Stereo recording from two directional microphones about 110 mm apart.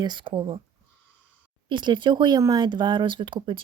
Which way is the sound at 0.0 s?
45° right (ahead or behind).